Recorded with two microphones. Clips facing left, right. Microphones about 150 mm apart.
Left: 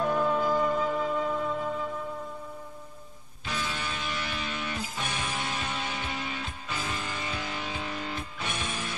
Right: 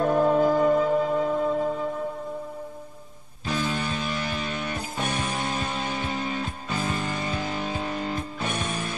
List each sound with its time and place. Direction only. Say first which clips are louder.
0.0 s music: right 6 dB; 45° right (ahead or behind)
3.4 s music: right 7 dB; 40° right (ahead or behind)